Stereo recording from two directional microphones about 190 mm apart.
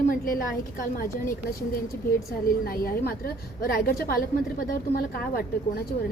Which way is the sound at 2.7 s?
50° left (ahead or behind).